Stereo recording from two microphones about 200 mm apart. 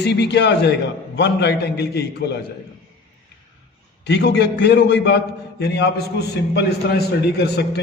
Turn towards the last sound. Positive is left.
turn(degrees=55)  # may be behind; listen again after turning